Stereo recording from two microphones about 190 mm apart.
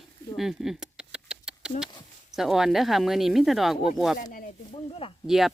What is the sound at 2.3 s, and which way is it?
Speech, centre (ahead or behind).